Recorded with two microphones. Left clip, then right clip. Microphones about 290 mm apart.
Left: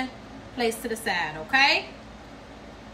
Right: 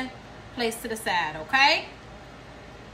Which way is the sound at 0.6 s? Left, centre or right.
Centre.